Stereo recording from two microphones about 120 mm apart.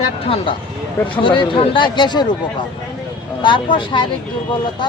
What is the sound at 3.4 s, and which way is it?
Speech, 40° left (ahead or behind).